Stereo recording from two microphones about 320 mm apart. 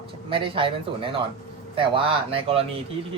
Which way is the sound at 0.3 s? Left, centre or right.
Centre.